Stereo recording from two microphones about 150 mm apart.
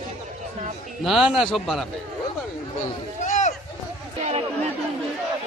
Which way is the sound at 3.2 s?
55° left (ahead or behind).